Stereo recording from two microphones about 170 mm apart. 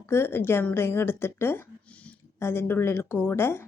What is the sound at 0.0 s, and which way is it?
Speech, 15° left (ahead or behind).